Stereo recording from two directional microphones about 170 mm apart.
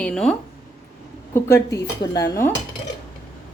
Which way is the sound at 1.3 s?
15° left (ahead or behind).